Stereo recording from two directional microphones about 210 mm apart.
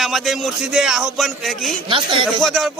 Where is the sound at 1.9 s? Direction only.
25° right (ahead or behind).